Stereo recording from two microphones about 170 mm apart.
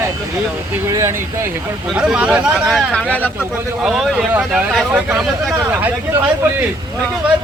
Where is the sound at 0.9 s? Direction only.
15° right (ahead or behind).